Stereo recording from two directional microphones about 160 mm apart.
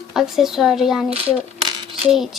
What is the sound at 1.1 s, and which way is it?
Speech, 40° right (ahead or behind).